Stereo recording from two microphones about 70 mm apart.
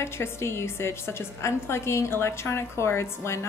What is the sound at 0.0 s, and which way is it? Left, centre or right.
A woman's voice, left.